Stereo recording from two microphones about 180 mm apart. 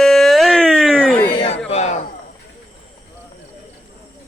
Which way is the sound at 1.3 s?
30° left (ahead or behind).